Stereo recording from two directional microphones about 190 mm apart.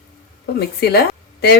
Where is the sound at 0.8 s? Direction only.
55° left (ahead or behind).